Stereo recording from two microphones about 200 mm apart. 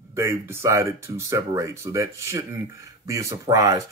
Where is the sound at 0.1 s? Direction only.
10° right (ahead or behind).